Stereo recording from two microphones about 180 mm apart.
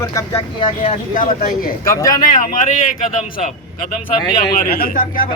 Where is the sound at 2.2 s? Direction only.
45° left (ahead or behind).